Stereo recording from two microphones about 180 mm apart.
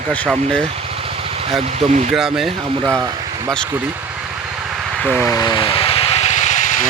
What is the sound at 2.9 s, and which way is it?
Speech, 15° right (ahead or behind).